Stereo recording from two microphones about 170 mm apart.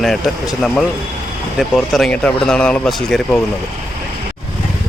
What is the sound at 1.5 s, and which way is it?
Speech, centre (ahead or behind).